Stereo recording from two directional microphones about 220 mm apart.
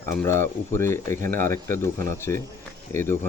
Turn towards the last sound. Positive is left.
turn(degrees=10)  # may be behind; listen again after turning